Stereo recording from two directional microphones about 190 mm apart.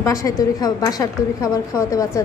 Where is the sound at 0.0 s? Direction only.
15° left (ahead or behind).